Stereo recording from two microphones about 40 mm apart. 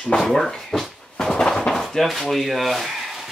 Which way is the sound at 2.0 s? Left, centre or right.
Centre.